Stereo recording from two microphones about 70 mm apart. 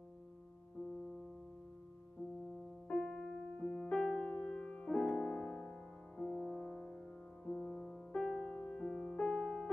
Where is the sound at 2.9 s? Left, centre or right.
Centre.